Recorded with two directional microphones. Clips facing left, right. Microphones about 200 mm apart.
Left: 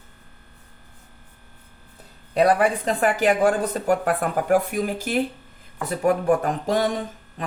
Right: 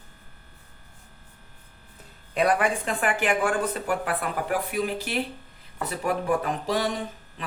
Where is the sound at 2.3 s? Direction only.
35° left (ahead or behind).